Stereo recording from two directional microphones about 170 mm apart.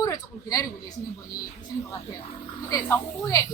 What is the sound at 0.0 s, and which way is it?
Speech, 20° left (ahead or behind).